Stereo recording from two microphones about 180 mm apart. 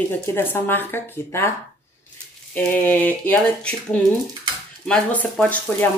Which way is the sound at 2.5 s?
10° left (ahead or behind).